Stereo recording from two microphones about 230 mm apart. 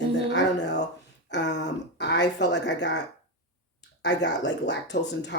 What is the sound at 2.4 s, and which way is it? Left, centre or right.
Speech, left.